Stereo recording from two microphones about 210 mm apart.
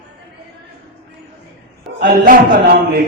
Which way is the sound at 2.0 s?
45° right (ahead or behind).